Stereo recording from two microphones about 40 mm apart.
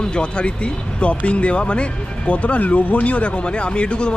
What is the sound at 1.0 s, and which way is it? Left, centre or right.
Speech, left.